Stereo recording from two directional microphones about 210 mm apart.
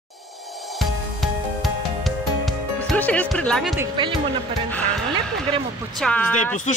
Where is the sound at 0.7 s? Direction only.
Centre (ahead or behind).